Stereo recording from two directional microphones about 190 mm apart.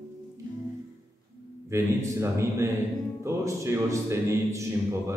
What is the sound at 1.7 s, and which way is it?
Speech, 15° right (ahead or behind).